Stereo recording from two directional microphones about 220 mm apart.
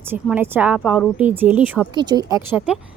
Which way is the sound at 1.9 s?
20° right (ahead or behind).